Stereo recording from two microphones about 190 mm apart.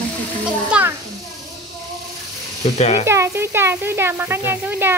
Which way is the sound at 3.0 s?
15° right (ahead or behind).